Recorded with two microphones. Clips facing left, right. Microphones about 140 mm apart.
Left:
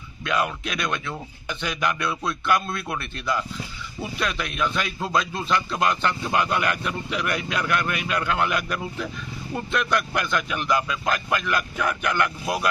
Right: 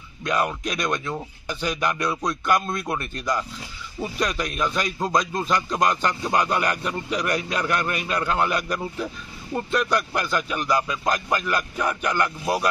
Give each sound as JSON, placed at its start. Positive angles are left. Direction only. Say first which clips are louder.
{"t": 0.2, "sound": "a man's voice", "louder": "right 1 dB", "side_deg": -40}